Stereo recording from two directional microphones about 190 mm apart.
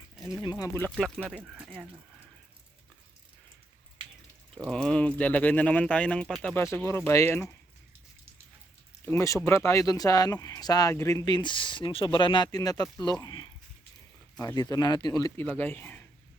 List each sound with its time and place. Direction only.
0.6 s speech: 15° left (ahead or behind)
0.9 s speech: 5° left (ahead or behind)
4.5 s speech: 5° left (ahead or behind)
9.0 s speech: 15° left (ahead or behind)